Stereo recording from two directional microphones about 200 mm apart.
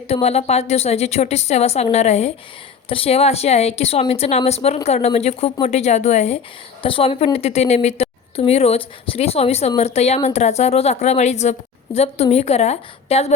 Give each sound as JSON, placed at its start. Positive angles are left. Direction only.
{"t": 0.1, "sound": "a woman's voice", "side_deg": 30}